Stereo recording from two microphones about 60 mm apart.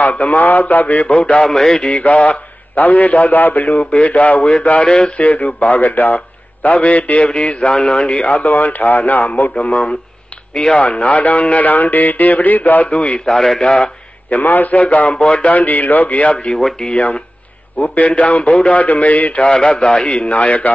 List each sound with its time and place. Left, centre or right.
0.0 s a man's voice: left
1.4 s a man's voice: centre
5.1 s a man's voice: left
13.0 s a man's voice: centre
14.3 s a man's voice: left
16.5 s speech: centre
16.9 s a man's voice: left
19.4 s a man's voice: centre